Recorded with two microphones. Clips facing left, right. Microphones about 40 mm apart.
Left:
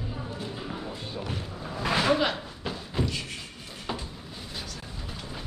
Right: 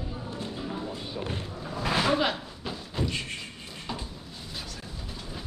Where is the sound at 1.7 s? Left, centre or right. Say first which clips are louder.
Left 1 dB; centre.